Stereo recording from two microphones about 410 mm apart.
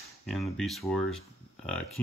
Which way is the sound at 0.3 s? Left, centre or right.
Centre.